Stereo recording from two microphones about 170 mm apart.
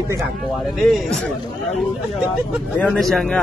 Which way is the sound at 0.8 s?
Centre (ahead or behind).